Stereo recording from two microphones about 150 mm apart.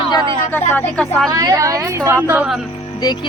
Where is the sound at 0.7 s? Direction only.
15° left (ahead or behind).